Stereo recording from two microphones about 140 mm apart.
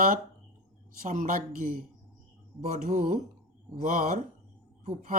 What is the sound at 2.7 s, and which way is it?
A woman's voice, 60° right (ahead or behind).